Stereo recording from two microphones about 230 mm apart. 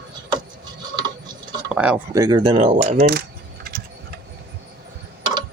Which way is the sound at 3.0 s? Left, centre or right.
Right.